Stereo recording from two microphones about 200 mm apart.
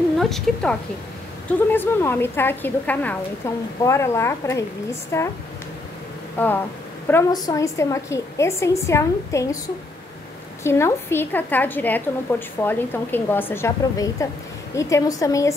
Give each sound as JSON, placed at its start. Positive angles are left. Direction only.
{"t": 0.2, "sound": "a woman's voice", "side_deg": 0}
{"t": 6.3, "sound": "a woman's voice", "side_deg": 10}
{"t": 10.6, "sound": "a woman's voice", "side_deg": 10}